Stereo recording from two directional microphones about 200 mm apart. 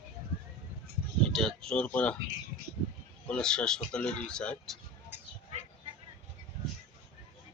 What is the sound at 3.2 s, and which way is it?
Speech, 5° left (ahead or behind).